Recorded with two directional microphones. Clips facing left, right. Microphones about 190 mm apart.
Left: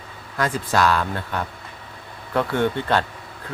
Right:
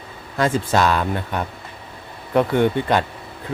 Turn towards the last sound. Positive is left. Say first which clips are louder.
# right 3 dB
turn(degrees=-15)  # may be behind; listen again after turning